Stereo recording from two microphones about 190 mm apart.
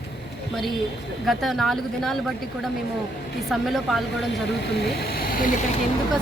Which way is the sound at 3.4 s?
Centre (ahead or behind).